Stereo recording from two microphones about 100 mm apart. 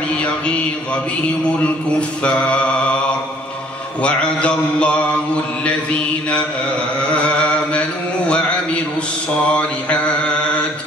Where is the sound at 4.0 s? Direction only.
10° left (ahead or behind).